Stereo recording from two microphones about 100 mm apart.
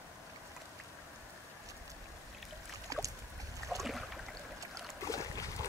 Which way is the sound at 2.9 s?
35° right (ahead or behind).